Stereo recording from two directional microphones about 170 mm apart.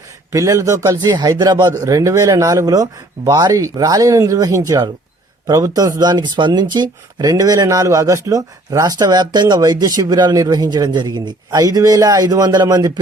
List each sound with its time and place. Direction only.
0.3 s speech: 20° right (ahead or behind)